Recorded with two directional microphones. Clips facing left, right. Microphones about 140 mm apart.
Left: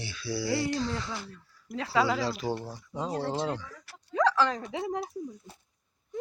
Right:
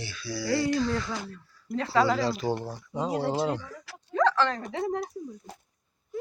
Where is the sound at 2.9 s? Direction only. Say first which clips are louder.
Right 4 dB; 5° right (ahead or behind).